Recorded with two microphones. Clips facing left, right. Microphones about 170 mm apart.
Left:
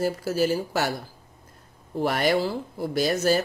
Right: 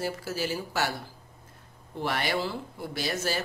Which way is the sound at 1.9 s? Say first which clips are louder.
Left 7 dB; 45° left (ahead or behind).